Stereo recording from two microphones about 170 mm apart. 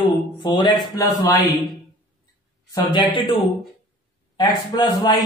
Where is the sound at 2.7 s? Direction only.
25° left (ahead or behind).